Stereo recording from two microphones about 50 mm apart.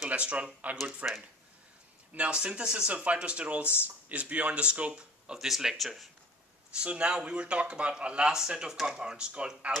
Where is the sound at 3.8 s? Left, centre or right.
Right; by 5.4 s centre.